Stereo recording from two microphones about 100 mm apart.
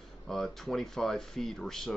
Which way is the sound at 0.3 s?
5° left (ahead or behind).